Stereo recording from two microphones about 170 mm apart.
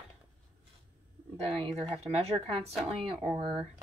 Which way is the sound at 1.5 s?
35° right (ahead or behind).